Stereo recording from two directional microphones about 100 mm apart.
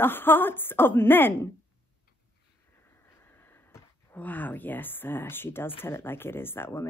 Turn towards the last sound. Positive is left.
turn(degrees=25)  # may be behind; listen again after turning